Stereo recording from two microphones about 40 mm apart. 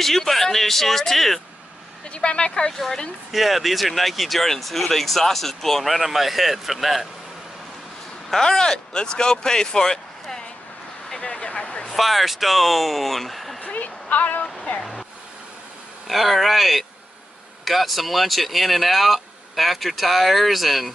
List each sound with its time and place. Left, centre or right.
0.0 s speech: centre
2.0 s a woman's voice: left
3.3 s speech: centre
8.4 s speech: centre
11.1 s vehicle: left
11.9 s speech: centre
13.6 s a sound: left
16.1 s speech: centre